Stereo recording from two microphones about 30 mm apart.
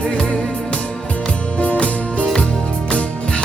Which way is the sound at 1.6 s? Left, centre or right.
Left.